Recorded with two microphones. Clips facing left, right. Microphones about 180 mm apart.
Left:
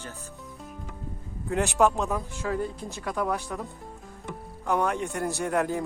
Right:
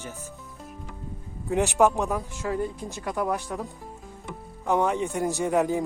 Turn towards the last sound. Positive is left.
turn(degrees=-15)  # may be behind; listen again after turning